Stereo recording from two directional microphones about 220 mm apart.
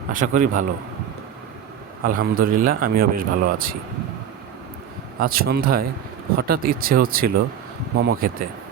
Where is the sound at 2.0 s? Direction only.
40° right (ahead or behind).